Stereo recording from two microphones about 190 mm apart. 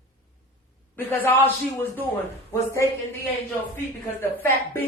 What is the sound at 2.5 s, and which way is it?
Speech, 15° left (ahead or behind).